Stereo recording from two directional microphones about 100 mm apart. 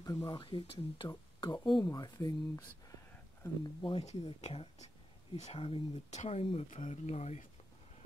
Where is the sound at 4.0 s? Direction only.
85° left.